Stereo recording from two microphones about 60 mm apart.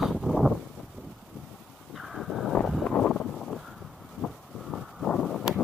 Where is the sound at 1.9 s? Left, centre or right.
Centre.